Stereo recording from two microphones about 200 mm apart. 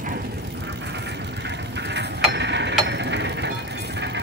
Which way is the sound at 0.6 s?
60° right (ahead or behind).